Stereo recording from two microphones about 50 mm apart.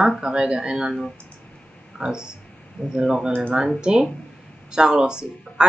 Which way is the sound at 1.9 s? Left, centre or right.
Centre.